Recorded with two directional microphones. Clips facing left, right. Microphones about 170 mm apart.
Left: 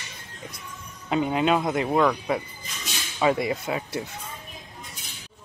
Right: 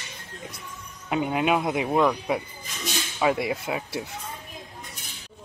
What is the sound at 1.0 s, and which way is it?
Speech, 5° right (ahead or behind).